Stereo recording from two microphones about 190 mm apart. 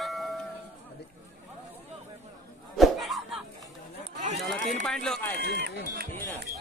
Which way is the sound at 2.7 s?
Centre (ahead or behind).